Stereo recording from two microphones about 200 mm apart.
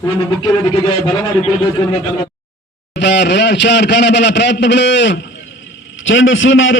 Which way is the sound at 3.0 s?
60° left (ahead or behind).